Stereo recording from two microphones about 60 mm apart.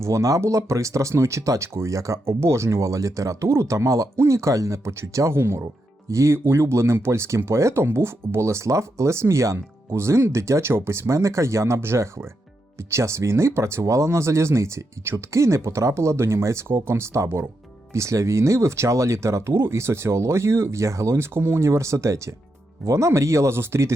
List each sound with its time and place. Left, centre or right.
0.0 s speech: right
4.2 s speech: right
6.1 s speech: right